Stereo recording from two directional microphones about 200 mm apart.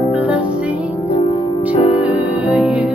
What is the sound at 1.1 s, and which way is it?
Music, 25° left (ahead or behind).